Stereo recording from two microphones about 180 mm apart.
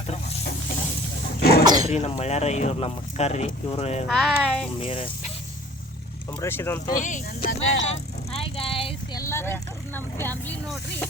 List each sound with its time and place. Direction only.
0.1 s stir: 40° left (ahead or behind)
1.4 s sneeze: 60° left (ahead or behind)
1.9 s speech: 35° left (ahead or behind)
4.1 s speech: centre (ahead or behind)
4.8 s speech: 30° left (ahead or behind)
6.4 s speech: 15° left (ahead or behind)
6.9 s speech: 45° left (ahead or behind)
7.9 s vehicle: 35° left (ahead or behind)
9.2 s speech: 15° left (ahead or behind)